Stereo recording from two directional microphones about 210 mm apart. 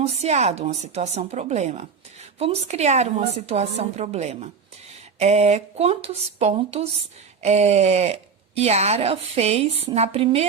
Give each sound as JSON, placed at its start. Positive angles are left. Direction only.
{"t": 0.0, "sound": "a woman's voice", "side_deg": -30}